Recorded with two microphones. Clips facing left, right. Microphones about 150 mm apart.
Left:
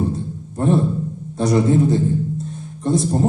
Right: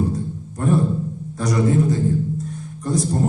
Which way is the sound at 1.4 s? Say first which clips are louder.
Left 3 dB; 25° left (ahead or behind).